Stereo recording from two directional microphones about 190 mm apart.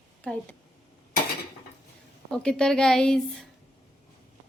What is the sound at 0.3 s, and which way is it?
Speech, 5° left (ahead or behind).